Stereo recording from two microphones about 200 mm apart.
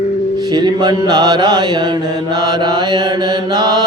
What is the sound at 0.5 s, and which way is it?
Mantra, 20° right (ahead or behind).